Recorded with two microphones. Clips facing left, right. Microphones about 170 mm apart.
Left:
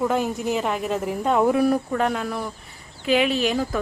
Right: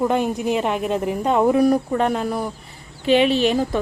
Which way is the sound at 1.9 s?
25° right (ahead or behind).